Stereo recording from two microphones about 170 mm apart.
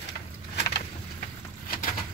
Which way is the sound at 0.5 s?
75° left (ahead or behind).